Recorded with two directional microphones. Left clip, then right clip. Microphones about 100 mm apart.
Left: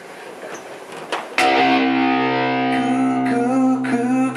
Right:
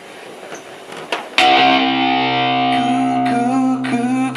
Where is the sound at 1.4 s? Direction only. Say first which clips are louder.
Right 4 dB; 25° right (ahead or behind).